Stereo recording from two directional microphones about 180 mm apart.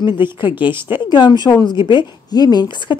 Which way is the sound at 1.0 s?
25° left (ahead or behind).